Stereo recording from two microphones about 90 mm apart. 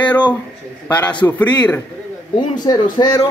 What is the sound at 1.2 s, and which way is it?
Speech, 15° left (ahead or behind).